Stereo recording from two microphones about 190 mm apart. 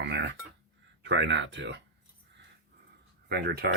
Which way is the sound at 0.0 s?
65° right (ahead or behind).